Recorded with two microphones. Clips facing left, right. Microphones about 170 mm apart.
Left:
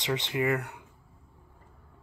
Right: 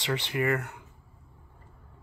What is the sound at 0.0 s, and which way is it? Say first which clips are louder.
Speech: even; 20° left (ahead or behind).